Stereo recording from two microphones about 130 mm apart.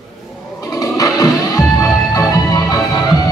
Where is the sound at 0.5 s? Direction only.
30° left (ahead or behind).